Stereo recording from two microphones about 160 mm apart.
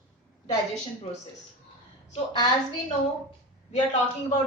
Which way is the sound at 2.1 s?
30° left (ahead or behind).